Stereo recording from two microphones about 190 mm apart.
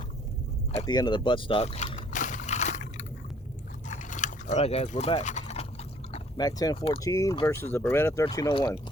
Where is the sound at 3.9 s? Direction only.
40° left (ahead or behind).